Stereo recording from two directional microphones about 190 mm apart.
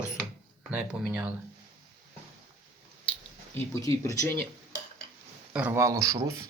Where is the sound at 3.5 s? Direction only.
15° left (ahead or behind).